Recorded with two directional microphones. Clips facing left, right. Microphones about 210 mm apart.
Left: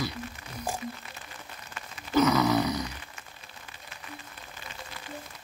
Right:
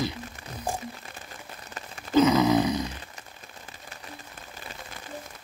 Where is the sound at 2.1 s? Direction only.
20° right (ahead or behind).